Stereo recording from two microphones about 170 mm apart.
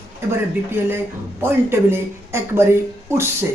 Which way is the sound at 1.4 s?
15° right (ahead or behind).